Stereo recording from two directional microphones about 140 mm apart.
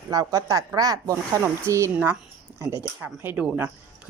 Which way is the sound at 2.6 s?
25° right (ahead or behind).